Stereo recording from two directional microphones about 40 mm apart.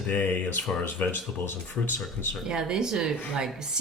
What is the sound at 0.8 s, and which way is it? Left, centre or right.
Speech, left.